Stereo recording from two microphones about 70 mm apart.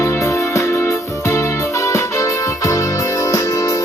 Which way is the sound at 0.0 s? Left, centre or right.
Left.